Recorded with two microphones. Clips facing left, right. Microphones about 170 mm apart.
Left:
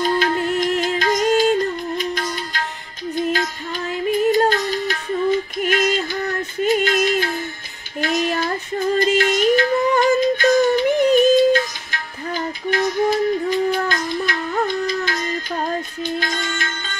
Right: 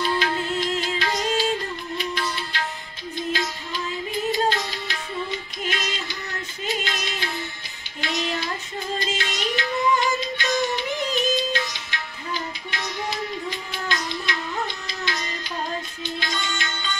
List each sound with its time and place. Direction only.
0.0 s music: 50° left (ahead or behind)